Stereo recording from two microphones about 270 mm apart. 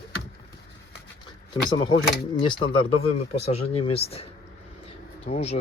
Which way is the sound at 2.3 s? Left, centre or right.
Centre.